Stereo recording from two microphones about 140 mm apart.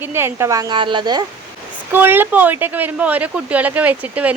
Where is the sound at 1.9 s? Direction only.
15° right (ahead or behind).